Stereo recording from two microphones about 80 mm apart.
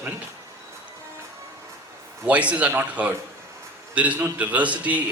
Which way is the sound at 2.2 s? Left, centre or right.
Centre.